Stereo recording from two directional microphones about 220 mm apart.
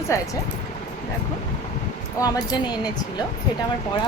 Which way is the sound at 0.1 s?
15° left (ahead or behind).